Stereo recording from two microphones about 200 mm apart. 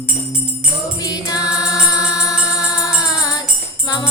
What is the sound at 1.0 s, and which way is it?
Music, 20° left (ahead or behind).